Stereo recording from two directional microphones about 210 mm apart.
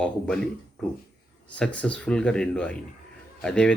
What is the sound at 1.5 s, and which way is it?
Speech, 5° left (ahead or behind).